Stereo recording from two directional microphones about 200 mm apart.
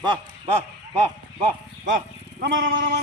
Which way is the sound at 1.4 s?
40° right (ahead or behind).